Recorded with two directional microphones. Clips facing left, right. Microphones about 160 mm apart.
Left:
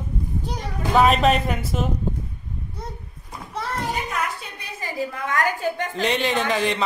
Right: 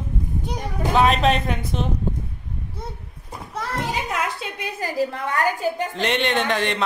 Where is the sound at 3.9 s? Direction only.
90° right.